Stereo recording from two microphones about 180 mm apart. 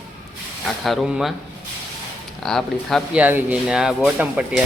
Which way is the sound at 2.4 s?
Centre (ahead or behind).